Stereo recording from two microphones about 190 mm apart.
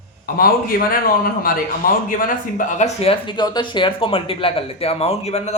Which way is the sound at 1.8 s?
50° left (ahead or behind).